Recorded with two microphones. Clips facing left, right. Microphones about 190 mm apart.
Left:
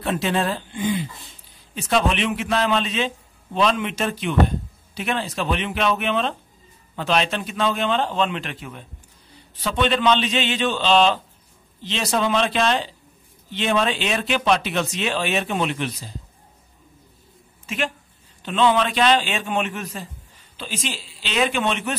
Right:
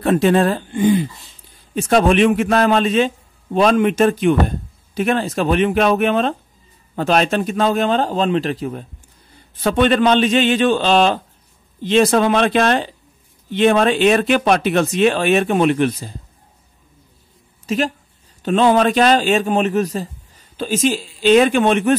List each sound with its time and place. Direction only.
0.0 s a man's voice: 50° right (ahead or behind)
9.6 s a man's voice: 50° right (ahead or behind)
17.6 s a man's voice: 40° right (ahead or behind)